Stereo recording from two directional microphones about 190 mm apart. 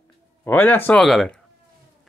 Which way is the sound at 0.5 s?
10° left (ahead or behind).